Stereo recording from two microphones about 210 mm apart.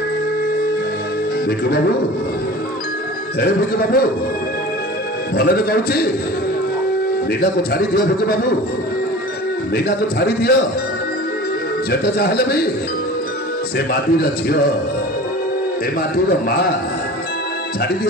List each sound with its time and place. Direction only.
3.3 s a man's voice: 45° left (ahead or behind)
5.4 s a man's voice: 45° left (ahead or behind)
7.7 s a man's voice: 50° left (ahead or behind)
9.8 s a man's voice: 50° left (ahead or behind)
11.9 s a man's voice: 50° left (ahead or behind)
13.7 s a man's voice: 50° left (ahead or behind)
16.3 s a man's voice: 45° left (ahead or behind)